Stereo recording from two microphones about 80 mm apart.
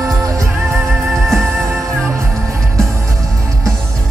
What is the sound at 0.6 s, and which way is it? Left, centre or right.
Music, right.